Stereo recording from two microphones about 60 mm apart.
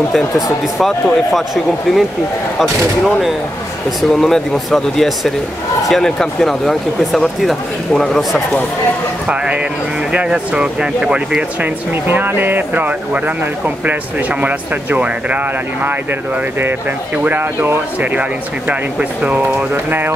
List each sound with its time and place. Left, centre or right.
0.7 s speech: centre
4.1 s speech: centre
10.1 s speech: centre
11.6 s speech: right
14.4 s speech: right
17.2 s speech: right
18.7 s speech: right
19.7 s speech: right